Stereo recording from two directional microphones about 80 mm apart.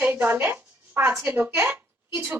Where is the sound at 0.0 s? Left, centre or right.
Right.